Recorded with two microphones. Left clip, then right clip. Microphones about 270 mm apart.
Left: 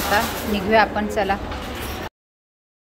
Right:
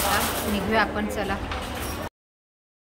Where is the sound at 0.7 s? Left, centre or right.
Centre.